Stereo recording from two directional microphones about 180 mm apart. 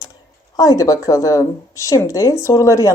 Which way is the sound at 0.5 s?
20° left (ahead or behind).